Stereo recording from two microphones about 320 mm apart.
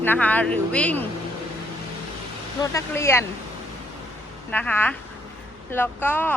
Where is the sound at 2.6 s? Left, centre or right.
Centre.